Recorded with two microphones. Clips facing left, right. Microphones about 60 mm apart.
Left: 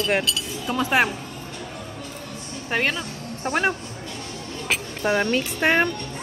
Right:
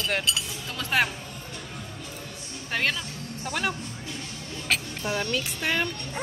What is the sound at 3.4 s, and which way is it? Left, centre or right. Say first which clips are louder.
Speech: left 7 dB; left.